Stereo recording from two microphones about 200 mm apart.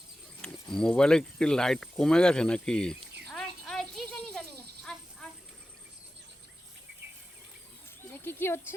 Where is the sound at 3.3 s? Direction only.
5° left (ahead or behind).